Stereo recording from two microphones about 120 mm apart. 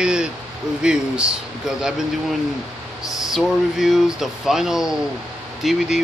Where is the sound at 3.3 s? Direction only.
5° right (ahead or behind).